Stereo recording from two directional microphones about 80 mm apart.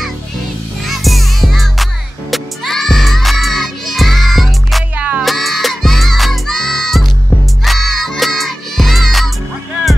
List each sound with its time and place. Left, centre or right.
0.8 s music: centre
4.9 s music: right
5.2 s music: centre